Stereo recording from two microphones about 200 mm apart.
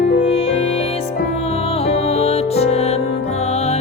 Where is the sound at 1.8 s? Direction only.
30° left (ahead or behind).